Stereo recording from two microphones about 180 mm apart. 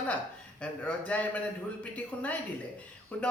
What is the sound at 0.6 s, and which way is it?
Speech, 5° left (ahead or behind).